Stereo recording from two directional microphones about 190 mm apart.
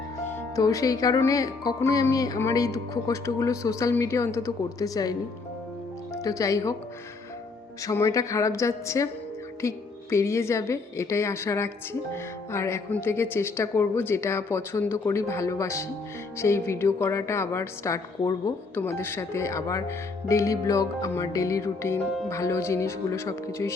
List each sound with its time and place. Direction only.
0.3 s a woman's voice: 15° left (ahead or behind)
6.2 s a woman's voice: 15° left (ahead or behind)
7.8 s a woman's voice: 15° left (ahead or behind)